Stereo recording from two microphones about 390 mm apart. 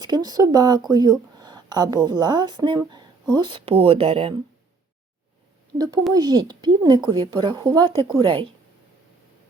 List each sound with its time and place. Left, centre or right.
0.0 s a woman's voice: centre
5.7 s a woman's voice: centre